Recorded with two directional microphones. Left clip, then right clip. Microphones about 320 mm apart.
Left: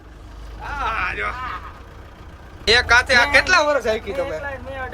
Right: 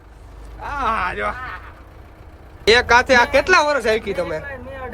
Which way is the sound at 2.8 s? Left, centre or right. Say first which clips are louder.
Right 1 dB; centre.